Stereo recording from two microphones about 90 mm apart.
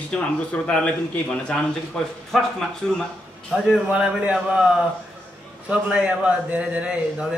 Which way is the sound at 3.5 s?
15° right (ahead or behind).